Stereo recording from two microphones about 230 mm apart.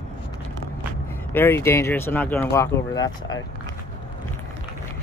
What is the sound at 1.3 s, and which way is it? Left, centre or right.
Speech, centre.